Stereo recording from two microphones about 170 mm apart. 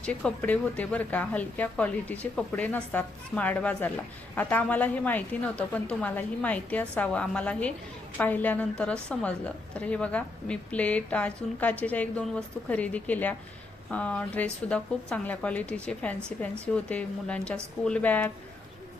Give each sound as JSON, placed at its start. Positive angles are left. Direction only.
{"t": 0.0, "sound": "speech", "side_deg": 5}